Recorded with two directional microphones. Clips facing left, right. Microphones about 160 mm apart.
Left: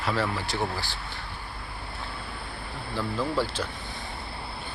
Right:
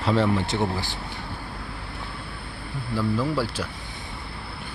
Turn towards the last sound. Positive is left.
turn(degrees=-5)  # may be behind; listen again after turning